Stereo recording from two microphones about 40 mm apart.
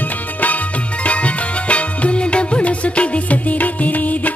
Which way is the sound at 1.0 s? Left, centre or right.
Left.